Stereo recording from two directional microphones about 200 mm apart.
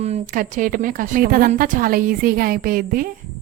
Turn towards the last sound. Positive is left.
turn(degrees=-45)  # may be behind; listen again after turning